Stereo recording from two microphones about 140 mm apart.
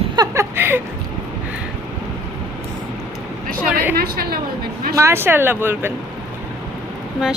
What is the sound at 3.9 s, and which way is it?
Speech, 90° right.